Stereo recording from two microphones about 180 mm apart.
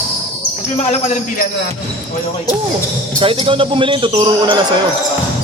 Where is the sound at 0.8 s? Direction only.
40° left (ahead or behind).